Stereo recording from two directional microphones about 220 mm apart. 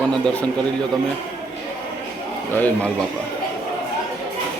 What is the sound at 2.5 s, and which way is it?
Speech, 10° left (ahead or behind).